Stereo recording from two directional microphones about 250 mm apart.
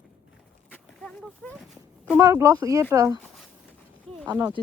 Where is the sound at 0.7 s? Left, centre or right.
Centre.